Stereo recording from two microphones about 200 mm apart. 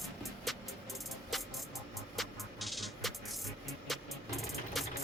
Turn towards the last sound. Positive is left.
turn(degrees=0)  # may be behind; listen again after turning